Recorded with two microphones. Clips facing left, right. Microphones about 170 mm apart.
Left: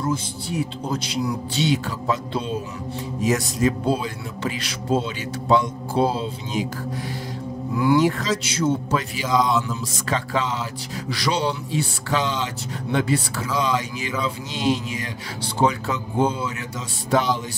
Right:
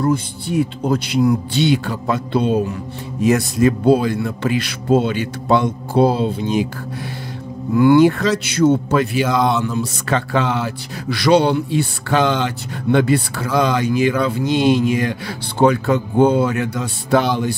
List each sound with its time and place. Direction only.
0.0 s speech: 60° right (ahead or behind)
7.7 s speech: 60° right (ahead or behind)